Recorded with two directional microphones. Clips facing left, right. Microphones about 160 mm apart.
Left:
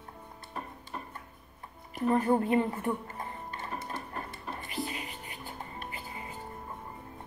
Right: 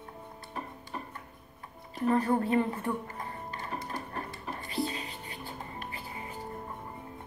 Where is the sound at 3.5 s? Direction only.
25° left (ahead or behind).